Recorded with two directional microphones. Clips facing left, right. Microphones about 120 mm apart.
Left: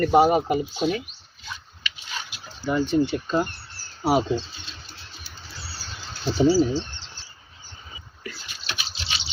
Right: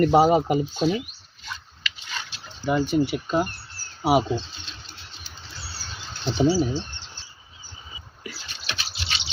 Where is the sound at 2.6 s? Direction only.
15° right (ahead or behind).